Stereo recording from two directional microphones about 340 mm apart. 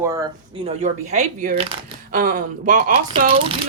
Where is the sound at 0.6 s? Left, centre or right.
Centre.